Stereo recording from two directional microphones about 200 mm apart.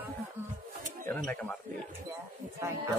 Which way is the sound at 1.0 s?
5° left (ahead or behind).